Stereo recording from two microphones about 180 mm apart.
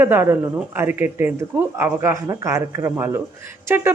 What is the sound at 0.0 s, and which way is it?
Speech, 10° right (ahead or behind).